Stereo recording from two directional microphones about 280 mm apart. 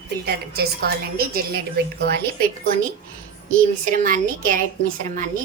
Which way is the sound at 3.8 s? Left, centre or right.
Right.